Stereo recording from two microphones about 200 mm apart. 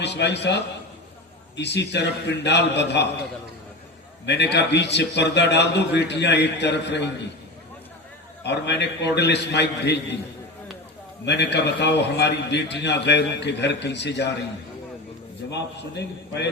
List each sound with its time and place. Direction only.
0.0 s a man's voice: 60° left (ahead or behind)
4.5 s a man's voice: 60° left (ahead or behind)
8.4 s a man's voice: 60° left (ahead or behind)
11.3 s a man's voice: 60° left (ahead or behind)
15.4 s a man's voice: 60° left (ahead or behind)